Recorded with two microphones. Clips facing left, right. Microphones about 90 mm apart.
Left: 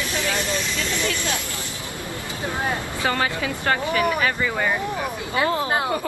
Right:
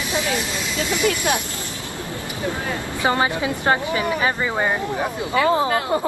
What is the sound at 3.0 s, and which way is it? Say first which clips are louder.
Speech: right 4 dB; 20° right (ahead or behind).